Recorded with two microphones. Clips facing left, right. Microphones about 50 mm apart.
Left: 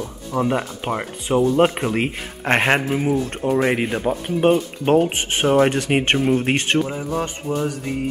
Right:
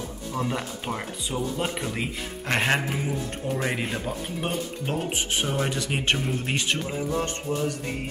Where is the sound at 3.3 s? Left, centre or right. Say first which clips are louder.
Left 9 dB; left.